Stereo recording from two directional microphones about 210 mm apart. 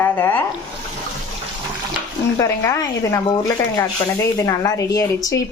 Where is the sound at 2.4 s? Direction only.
15° left (ahead or behind).